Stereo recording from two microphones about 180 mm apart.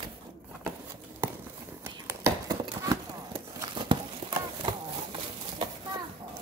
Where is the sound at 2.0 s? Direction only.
15° right (ahead or behind).